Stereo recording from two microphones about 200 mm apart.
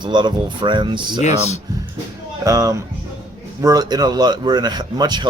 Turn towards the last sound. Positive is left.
turn(degrees=-20)  # may be behind; listen again after turning